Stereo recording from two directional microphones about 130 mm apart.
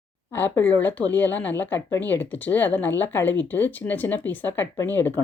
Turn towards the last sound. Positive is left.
turn(degrees=15)  # may be behind; listen again after turning